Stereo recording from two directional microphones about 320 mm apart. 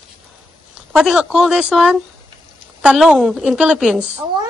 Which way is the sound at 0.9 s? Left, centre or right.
Centre.